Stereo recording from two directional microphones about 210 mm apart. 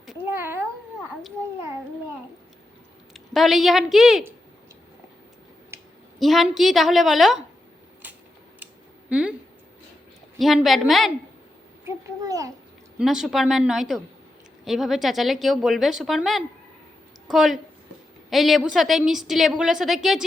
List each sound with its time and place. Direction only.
0.0 s cat: 5° right (ahead or behind)
3.1 s speech: centre (ahead or behind)
6.1 s a woman's voice: centre (ahead or behind)
8.5 s a sound: 5° right (ahead or behind)
10.3 s a woman's voice: centre (ahead or behind)
11.9 s a child's voice: 15° right (ahead or behind)
13.0 s a woman's voice: centre (ahead or behind)